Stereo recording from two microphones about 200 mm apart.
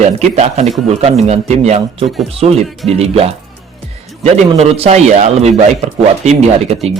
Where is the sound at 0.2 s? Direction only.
35° right (ahead or behind).